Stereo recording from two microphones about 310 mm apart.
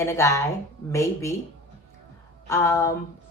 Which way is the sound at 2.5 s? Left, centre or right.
Centre.